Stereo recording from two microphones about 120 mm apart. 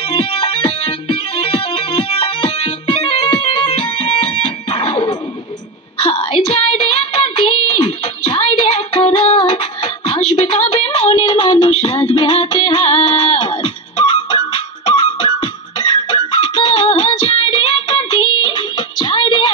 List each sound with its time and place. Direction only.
0.1 s music: 55° left (ahead or behind)
6.0 s a sound: 60° left (ahead or behind)
7.7 s music: 55° left (ahead or behind)